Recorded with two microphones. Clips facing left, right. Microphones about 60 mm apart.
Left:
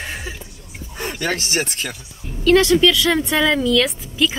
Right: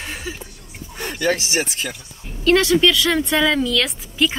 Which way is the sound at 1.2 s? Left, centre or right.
Left.